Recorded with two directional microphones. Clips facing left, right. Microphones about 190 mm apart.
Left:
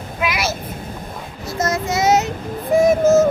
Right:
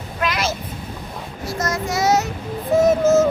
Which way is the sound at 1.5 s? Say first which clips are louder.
Left 3 dB; 25° left (ahead or behind).